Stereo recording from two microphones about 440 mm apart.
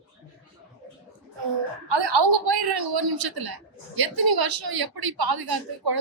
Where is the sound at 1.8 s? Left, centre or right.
Right.